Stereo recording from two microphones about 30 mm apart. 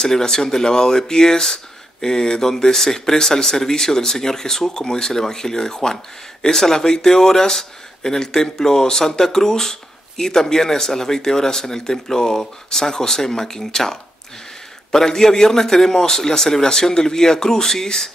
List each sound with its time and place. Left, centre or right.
0.0 s speech: centre